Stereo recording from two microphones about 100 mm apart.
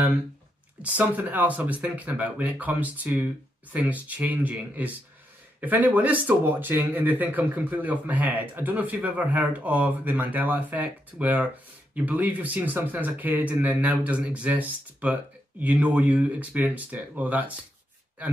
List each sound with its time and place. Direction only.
0.8 s speech: 15° right (ahead or behind)